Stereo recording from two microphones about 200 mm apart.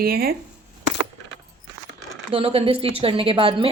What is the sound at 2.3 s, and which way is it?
A woman's voice, 30° right (ahead or behind).